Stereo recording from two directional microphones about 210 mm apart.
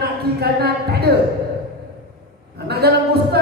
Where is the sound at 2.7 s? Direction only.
50° right (ahead or behind).